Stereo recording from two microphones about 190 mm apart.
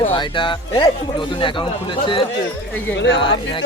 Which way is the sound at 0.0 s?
25° left (ahead or behind).